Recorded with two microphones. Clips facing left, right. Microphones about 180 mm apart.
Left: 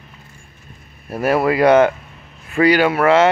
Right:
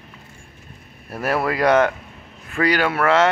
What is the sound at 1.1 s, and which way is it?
Speech, centre (ahead or behind).